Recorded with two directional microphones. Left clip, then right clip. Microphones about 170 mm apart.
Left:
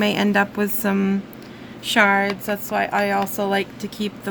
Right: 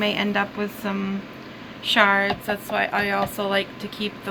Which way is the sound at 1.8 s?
75° left (ahead or behind).